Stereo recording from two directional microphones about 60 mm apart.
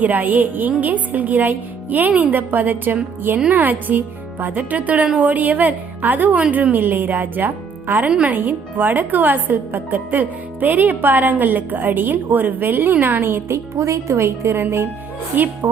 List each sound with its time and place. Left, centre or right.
0.0 s a woman's voice: right
15.6 s a woman's voice: right